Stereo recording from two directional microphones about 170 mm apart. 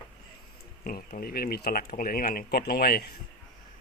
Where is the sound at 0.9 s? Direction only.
60° left (ahead or behind).